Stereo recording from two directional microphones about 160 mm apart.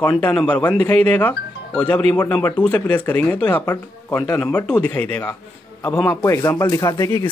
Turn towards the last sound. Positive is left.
turn(degrees=20)  # may be behind; listen again after turning